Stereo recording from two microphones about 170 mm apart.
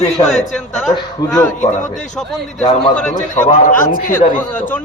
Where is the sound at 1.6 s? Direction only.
45° left (ahead or behind).